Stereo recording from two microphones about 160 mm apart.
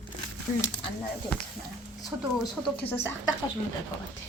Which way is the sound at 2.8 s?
10° left (ahead or behind).